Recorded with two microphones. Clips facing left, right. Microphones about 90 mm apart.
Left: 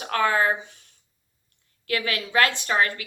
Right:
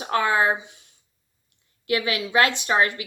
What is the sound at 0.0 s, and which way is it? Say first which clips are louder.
Speech: right 1 dB; 20° right (ahead or behind).